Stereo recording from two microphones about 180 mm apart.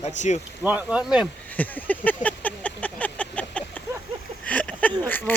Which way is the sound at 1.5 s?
10° left (ahead or behind).